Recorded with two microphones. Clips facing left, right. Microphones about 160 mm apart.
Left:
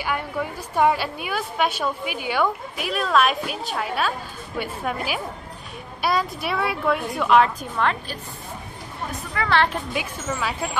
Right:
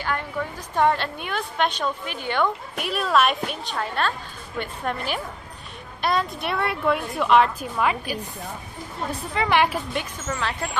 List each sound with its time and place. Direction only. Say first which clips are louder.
0.0 s a woman's voice: left 1 dB; 10° left (ahead or behind); by 8.2 s 10° right (ahead or behind)
9.3 s a woman's voice: even; 20° right (ahead or behind)
9.9 s a woman's voice: left 1 dB; 5° left (ahead or behind)